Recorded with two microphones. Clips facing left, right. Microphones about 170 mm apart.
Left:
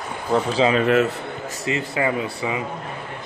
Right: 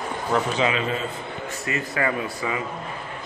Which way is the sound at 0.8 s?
75° left (ahead or behind).